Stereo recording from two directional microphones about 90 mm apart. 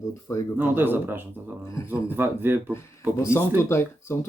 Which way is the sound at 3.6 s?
30° left (ahead or behind).